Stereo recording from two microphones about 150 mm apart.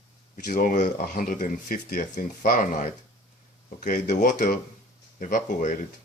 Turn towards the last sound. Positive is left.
turn(degrees=60)  # may be behind; listen again after turning